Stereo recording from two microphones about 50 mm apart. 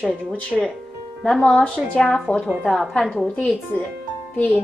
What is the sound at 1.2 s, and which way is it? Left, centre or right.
A woman's voice, centre.